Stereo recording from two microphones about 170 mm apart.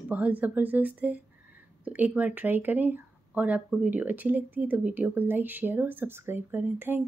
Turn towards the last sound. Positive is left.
turn(degrees=-10)  # may be behind; listen again after turning